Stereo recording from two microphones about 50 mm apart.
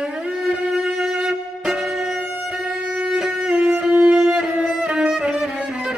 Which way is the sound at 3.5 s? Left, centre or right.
Right.